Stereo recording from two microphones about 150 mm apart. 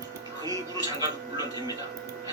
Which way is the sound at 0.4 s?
25° right (ahead or behind).